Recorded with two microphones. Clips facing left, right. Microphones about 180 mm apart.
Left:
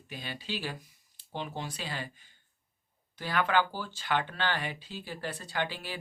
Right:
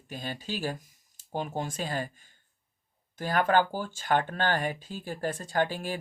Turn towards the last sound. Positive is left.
turn(degrees=-45)  # may be behind; listen again after turning